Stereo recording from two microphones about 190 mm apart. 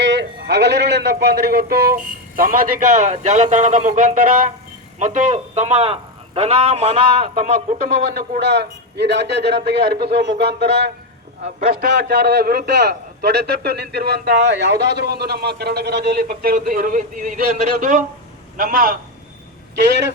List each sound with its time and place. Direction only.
0.0 s a man's voice: 65° right (ahead or behind); by 7.8 s 40° right (ahead or behind)
8.4 s a man's voice: 65° right (ahead or behind)
11.4 s a man's voice: 50° right (ahead or behind)